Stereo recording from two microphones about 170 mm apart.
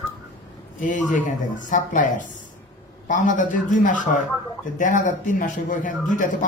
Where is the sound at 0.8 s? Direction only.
50° left (ahead or behind).